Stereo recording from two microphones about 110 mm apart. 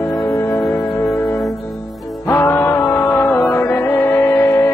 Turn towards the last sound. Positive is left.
turn(degrees=25)  # may be behind; listen again after turning